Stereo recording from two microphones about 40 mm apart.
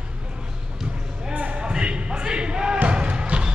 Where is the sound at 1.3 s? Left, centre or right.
Right.